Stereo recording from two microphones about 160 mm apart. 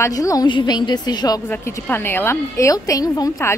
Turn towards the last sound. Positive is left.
turn(degrees=20)  # may be behind; listen again after turning